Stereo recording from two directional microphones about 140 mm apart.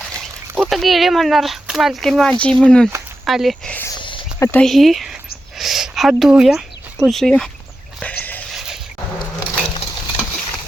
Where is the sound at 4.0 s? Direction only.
35° left (ahead or behind).